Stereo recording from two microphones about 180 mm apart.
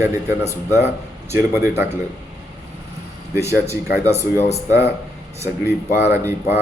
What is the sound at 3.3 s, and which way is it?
Speech, 15° right (ahead or behind).